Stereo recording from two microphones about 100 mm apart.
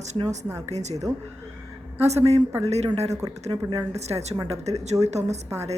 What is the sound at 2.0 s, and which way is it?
Speech, 90° right.